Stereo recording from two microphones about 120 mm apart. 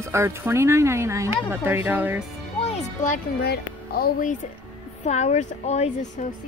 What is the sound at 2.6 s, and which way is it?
Speech, 60° left (ahead or behind).